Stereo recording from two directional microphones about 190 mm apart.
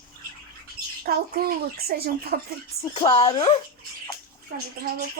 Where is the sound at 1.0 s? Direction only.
55° right (ahead or behind).